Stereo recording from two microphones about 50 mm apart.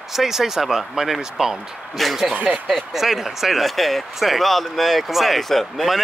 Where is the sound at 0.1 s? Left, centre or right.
Centre.